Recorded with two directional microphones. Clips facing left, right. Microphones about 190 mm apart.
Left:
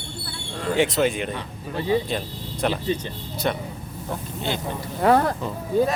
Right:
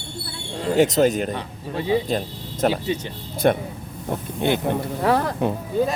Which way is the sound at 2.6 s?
40° right (ahead or behind).